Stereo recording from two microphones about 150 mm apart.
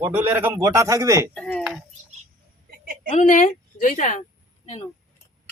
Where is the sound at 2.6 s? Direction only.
70° right (ahead or behind).